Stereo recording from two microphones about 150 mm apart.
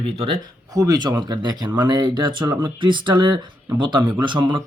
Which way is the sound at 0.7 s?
25° right (ahead or behind).